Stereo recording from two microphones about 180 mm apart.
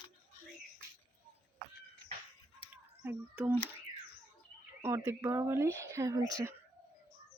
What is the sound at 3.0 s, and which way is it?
Speech, 10° right (ahead or behind).